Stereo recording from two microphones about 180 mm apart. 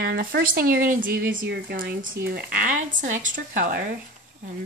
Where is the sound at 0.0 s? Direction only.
60° right (ahead or behind).